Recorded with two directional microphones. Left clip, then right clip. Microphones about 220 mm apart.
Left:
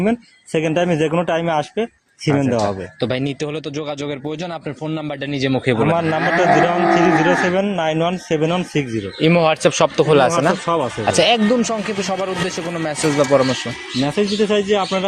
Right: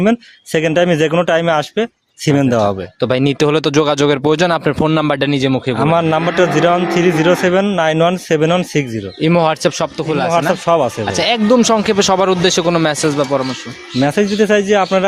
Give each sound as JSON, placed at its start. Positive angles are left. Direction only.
{"t": 0.0, "sound": "speech", "side_deg": -40}
{"t": 9.2, "sound": "speech", "side_deg": -30}
{"t": 9.7, "sound": "speech", "side_deg": -5}
{"t": 10.7, "sound": "speech", "side_deg": -50}
{"t": 11.1, "sound": "speech", "side_deg": -5}
{"t": 11.6, "sound": "speech", "side_deg": -40}
{"t": 13.3, "sound": "speech", "side_deg": 0}
{"t": 14.0, "sound": "speech", "side_deg": -50}